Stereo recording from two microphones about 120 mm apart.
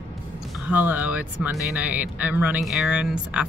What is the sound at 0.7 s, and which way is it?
Speech, 15° right (ahead or behind).